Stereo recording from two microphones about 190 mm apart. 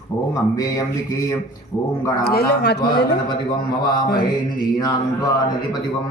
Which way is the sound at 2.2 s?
55° left (ahead or behind).